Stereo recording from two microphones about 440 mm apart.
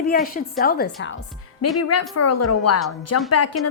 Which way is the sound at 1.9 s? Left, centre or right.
Left.